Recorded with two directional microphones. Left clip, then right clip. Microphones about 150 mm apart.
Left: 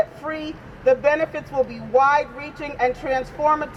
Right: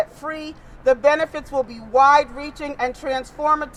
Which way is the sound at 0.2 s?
15° right (ahead or behind).